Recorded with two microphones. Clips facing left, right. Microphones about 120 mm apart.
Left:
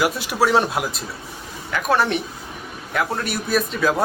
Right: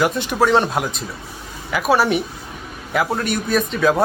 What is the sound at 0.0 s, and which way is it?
A man's voice, 5° left (ahead or behind).